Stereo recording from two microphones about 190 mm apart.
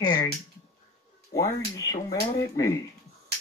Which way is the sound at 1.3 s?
15° left (ahead or behind).